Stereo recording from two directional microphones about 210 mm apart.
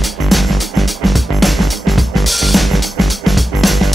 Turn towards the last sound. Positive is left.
turn(degrees=0)  # may be behind; listen again after turning